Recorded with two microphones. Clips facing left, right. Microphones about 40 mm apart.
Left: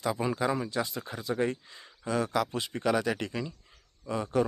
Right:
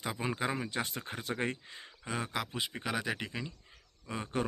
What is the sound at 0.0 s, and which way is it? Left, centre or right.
Speech, right.